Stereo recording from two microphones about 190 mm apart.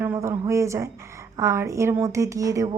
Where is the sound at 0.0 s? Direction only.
10° right (ahead or behind).